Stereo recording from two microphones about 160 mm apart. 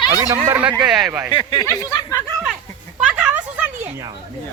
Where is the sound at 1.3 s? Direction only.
30° left (ahead or behind).